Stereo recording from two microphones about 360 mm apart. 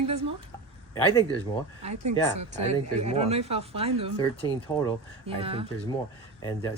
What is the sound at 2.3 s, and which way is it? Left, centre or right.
Speech, centre.